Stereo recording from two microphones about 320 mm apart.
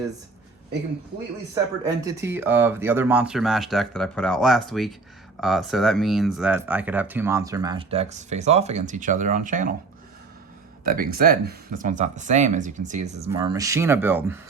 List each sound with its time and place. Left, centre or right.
2.0 s speech: centre
10.8 s speech: right; by 14.3 s centre